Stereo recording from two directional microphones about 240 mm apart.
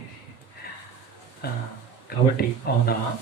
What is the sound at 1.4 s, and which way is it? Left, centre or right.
Speech, left.